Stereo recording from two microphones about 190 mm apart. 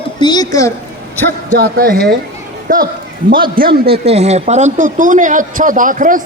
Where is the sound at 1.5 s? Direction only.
50° right (ahead or behind).